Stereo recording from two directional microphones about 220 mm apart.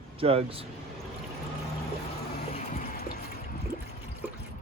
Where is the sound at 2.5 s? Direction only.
35° left (ahead or behind).